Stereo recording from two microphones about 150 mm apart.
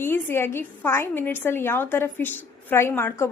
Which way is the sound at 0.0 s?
15° left (ahead or behind).